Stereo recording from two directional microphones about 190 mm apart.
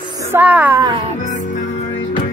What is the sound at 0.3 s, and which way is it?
Speech, 10° right (ahead or behind).